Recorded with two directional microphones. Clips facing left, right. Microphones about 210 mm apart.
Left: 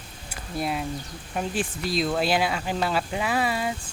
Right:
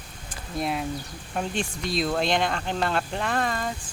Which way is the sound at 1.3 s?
5° left (ahead or behind).